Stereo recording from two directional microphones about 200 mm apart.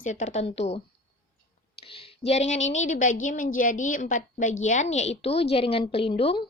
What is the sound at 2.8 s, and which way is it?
A woman's voice, 40° left (ahead or behind).